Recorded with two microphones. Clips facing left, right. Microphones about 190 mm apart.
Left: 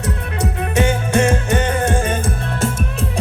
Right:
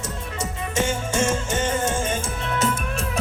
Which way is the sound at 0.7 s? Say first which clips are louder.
Left 6 dB; 60° left (ahead or behind).